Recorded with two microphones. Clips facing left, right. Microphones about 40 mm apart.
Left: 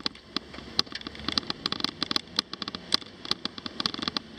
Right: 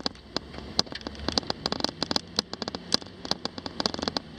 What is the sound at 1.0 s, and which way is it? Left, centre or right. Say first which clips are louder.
Fireworks: right 2 dB; left.